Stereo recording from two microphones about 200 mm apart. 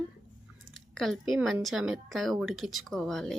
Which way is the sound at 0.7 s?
Centre (ahead or behind).